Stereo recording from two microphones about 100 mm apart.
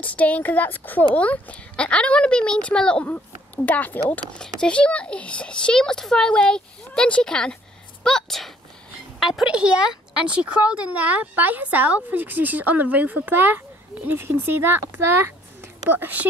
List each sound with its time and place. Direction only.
0.0 s a woman's voice: 15° left (ahead or behind); by 14.8 s 20° right (ahead or behind)
15.9 s speech: 20° right (ahead or behind)